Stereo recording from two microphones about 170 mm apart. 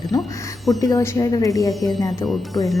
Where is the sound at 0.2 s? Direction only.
Centre (ahead or behind).